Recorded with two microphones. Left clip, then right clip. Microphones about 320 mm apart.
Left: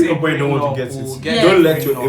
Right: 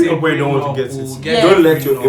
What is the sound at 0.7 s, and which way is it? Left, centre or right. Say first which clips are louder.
A woman's voice: right 2 dB; centre.